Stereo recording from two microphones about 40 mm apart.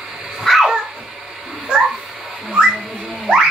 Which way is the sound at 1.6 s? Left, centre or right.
Right.